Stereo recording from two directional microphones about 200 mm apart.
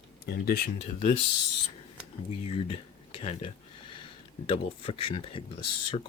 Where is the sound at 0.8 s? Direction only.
35° left (ahead or behind).